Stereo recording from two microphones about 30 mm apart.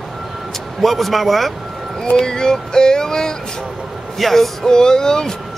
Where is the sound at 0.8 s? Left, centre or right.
Centre.